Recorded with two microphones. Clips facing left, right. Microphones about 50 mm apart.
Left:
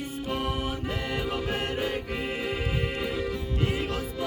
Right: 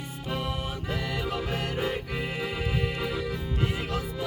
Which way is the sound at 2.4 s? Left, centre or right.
Centre.